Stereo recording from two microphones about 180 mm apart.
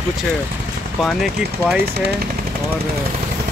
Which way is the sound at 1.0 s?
Centre (ahead or behind).